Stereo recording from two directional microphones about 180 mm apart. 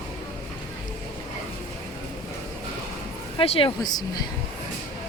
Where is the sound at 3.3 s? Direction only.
30° left (ahead or behind).